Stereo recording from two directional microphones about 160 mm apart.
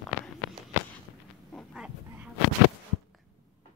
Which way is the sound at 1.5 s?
Centre (ahead or behind).